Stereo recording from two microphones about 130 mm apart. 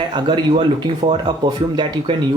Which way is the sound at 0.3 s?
45° right (ahead or behind).